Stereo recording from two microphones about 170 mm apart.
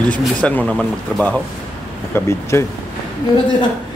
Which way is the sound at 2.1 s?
15° left (ahead or behind).